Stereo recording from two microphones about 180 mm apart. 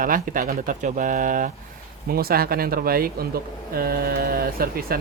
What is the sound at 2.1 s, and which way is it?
Speech, 55° right (ahead or behind).